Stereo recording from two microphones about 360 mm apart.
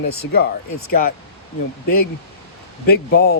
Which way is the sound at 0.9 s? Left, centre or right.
Left.